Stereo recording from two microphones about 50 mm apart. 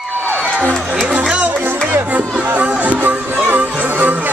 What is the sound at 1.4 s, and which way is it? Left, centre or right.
Music, right.